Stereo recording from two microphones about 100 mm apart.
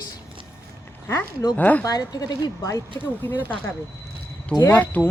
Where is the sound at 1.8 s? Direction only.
40° left (ahead or behind).